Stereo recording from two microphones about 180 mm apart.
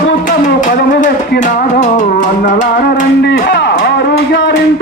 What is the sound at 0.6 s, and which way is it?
Music, 45° left (ahead or behind).